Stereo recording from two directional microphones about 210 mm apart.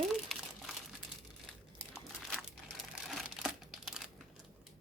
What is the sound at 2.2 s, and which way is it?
Crumpling, centre (ahead or behind).